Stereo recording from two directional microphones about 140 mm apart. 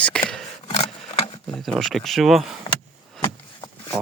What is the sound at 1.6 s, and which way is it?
Speech, centre (ahead or behind).